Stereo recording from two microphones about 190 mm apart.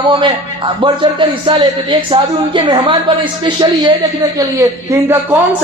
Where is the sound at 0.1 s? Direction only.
25° right (ahead or behind).